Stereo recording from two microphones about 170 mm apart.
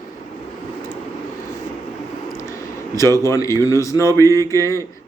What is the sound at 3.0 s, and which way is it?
Speech, 15° left (ahead or behind).